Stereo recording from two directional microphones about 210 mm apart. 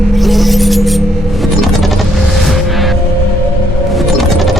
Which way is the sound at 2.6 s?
Centre (ahead or behind).